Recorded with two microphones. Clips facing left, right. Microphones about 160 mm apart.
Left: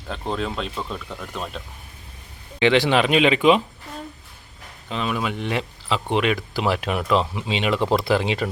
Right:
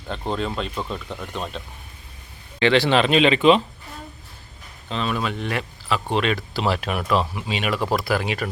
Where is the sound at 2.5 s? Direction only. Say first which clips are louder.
Even; 15° left (ahead or behind).